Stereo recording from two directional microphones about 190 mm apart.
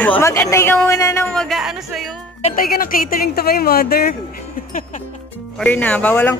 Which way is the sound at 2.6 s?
50° left (ahead or behind).